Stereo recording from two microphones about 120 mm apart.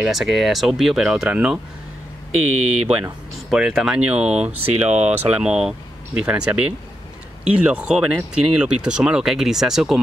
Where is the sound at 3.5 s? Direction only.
5° right (ahead or behind).